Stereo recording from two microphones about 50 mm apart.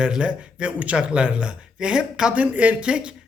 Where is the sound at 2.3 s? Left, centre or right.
Right.